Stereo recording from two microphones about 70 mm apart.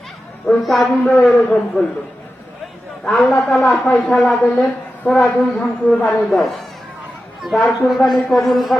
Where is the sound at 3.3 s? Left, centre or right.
Left.